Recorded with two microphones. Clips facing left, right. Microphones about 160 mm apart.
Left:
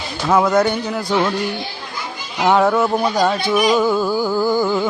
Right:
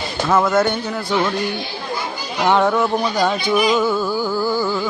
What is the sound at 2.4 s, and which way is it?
Speech, 5° left (ahead or behind).